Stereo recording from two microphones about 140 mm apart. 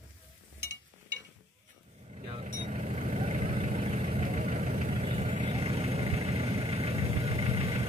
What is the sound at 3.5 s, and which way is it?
Vehicle, 45° right (ahead or behind).